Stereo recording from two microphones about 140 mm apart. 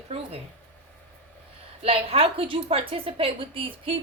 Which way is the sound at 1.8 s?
45° right (ahead or behind).